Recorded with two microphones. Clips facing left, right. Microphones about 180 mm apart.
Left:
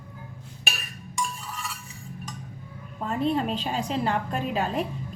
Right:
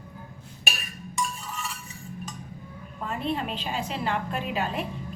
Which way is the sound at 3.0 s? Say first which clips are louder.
Left 4 dB; 40° left (ahead or behind).